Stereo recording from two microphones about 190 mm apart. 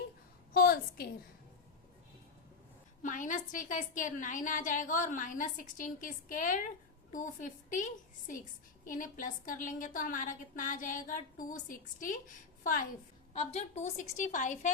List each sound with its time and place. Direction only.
0.5 s a sound: 50° left (ahead or behind)
3.0 s a woman's voice: 45° left (ahead or behind)
13.3 s a woman's voice: 35° left (ahead or behind)